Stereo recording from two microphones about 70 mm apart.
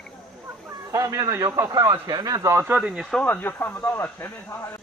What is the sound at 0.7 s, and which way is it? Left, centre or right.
Chicken, right.